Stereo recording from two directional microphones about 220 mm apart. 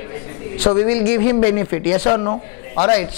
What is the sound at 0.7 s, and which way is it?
Speech, 15° left (ahead or behind).